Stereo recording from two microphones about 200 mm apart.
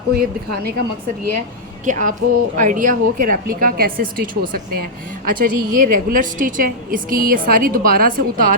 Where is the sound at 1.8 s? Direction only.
40° right (ahead or behind).